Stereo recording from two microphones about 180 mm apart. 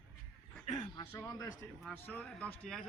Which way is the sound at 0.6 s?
40° left (ahead or behind).